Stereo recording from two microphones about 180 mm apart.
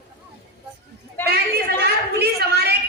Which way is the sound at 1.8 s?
65° right (ahead or behind).